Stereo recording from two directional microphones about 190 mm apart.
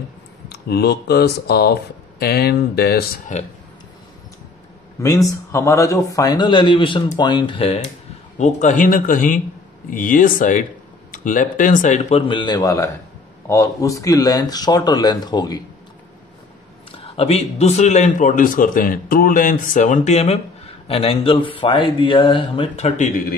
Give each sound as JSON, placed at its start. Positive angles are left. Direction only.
{"t": 0.5, "sound": "speech", "side_deg": 60}
{"t": 3.3, "sound": "a man's voice", "side_deg": 40}
{"t": 5.0, "sound": "a man's voice", "side_deg": 15}
{"t": 16.9, "sound": "a man's voice", "side_deg": 30}